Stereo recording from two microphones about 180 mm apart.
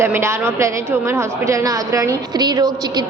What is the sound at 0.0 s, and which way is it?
A woman's voice, 15° right (ahead or behind).